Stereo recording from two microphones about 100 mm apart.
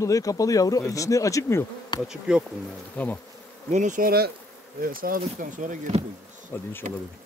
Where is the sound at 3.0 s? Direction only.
15° left (ahead or behind).